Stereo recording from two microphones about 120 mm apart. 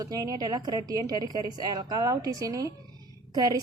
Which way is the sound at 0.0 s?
30° right (ahead or behind).